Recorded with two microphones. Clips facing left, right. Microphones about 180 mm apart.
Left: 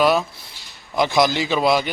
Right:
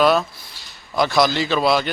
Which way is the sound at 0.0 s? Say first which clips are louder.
Right 1 dB; 10° left (ahead or behind).